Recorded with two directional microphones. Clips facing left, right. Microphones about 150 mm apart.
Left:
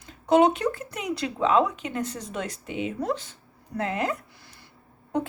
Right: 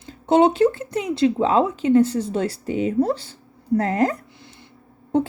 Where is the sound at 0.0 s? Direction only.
30° right (ahead or behind).